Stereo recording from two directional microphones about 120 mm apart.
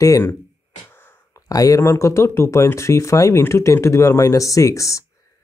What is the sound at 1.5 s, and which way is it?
Speech, 30° left (ahead or behind).